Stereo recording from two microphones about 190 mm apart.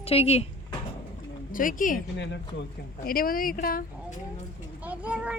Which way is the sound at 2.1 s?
65° left (ahead or behind).